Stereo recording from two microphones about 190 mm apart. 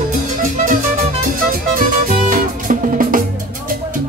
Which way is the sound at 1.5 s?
45° right (ahead or behind).